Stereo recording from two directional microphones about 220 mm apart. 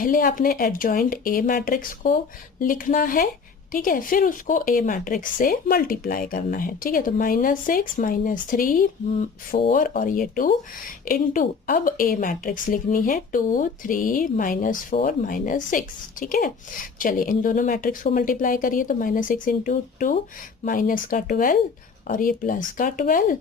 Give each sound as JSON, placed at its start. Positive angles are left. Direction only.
{"t": 0.0, "sound": "speech", "side_deg": 40}